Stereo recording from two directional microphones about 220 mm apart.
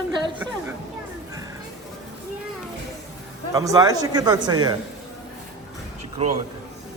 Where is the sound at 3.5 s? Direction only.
15° right (ahead or behind).